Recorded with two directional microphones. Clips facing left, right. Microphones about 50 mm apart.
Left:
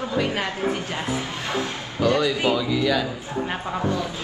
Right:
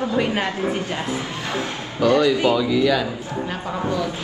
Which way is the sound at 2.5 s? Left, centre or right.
Centre.